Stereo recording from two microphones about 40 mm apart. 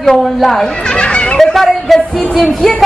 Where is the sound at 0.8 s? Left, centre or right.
Left.